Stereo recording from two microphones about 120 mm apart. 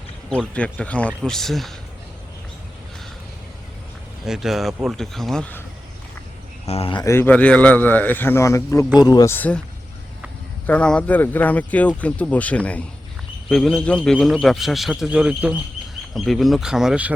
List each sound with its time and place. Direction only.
0.3 s speech: 10° left (ahead or behind)
4.3 s speech: centre (ahead or behind)
6.7 s speech: 55° left (ahead or behind)
7.0 s speech: 20° left (ahead or behind)
9.3 s speech: 15° left (ahead or behind)
10.7 s speech: 10° left (ahead or behind); by 15.5 s 10° right (ahead or behind)
16.1 s speech: centre (ahead or behind)